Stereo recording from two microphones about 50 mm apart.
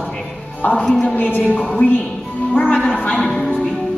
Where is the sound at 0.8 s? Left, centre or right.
Centre.